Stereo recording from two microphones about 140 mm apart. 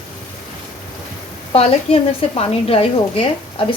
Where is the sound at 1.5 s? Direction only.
45° left (ahead or behind).